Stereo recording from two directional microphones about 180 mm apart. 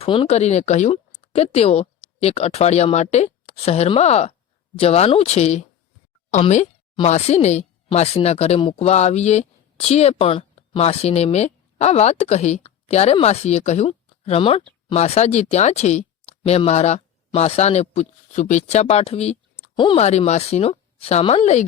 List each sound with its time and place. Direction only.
0.0 s speech: 30° left (ahead or behind)